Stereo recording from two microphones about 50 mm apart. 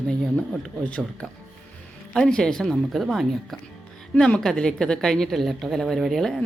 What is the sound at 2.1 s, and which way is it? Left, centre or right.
Speech, centre.